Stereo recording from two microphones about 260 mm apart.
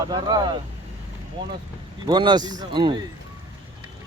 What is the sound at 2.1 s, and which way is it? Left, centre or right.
Speech, centre.